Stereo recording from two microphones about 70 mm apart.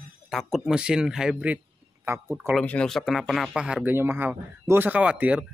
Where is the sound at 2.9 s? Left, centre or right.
Centre.